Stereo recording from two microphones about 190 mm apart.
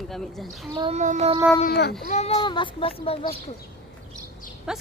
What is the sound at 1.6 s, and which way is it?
Speech, 60° left (ahead or behind).